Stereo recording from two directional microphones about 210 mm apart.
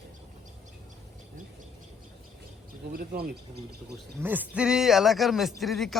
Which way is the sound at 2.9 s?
45° right (ahead or behind).